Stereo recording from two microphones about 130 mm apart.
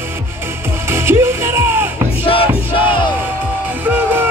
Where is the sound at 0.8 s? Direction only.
20° right (ahead or behind).